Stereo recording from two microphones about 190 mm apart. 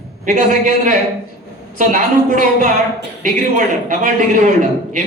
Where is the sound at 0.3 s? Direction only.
40° right (ahead or behind).